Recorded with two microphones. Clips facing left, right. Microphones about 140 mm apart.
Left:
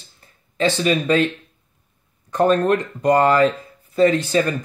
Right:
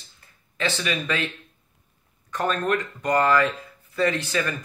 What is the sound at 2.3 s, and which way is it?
Speech, 35° left (ahead or behind).